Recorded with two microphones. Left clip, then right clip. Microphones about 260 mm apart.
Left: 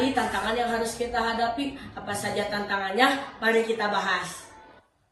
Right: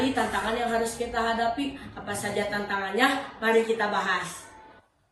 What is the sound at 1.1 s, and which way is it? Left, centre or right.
Speech, left.